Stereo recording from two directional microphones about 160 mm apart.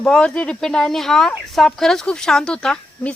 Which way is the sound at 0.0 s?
5° left (ahead or behind).